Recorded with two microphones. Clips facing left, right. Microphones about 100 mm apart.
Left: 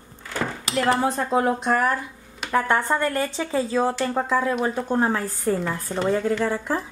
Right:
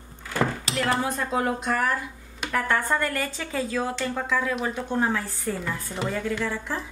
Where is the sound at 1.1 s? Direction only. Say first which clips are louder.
Left 4 dB; 25° left (ahead or behind); by 6.8 s 40° left (ahead or behind).